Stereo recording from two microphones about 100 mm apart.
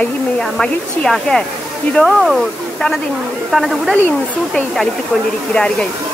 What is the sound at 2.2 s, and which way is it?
Speech, centre (ahead or behind).